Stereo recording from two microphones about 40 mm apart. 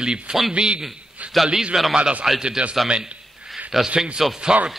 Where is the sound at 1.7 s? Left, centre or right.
Centre.